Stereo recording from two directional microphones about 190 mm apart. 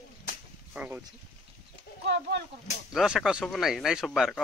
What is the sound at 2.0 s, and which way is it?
Speech, 60° right (ahead or behind).